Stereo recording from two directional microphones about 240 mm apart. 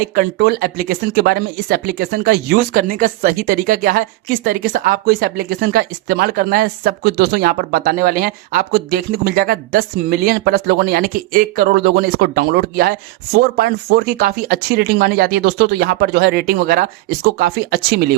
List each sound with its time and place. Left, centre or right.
0.2 s speech: right